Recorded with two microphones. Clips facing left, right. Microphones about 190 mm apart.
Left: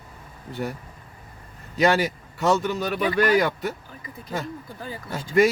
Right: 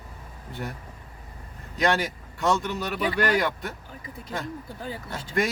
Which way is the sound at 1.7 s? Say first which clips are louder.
Left 4 dB; 5° left (ahead or behind).